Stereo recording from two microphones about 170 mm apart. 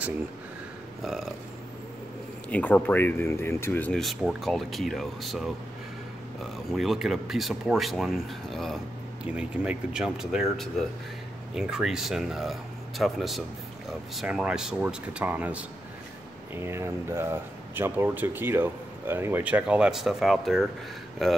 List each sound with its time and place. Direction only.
1.0 s speech: centre (ahead or behind)
2.5 s speech: 10° left (ahead or behind)
6.7 s speech: centre (ahead or behind)
16.6 s speech: 15° right (ahead or behind); by 21.3 s centre (ahead or behind)